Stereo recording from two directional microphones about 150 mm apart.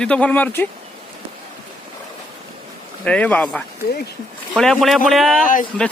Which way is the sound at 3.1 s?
10° left (ahead or behind).